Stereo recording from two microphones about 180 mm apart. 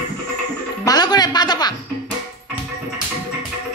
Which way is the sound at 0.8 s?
20° left (ahead or behind).